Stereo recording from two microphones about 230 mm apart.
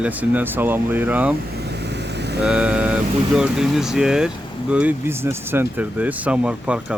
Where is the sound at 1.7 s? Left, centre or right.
Right.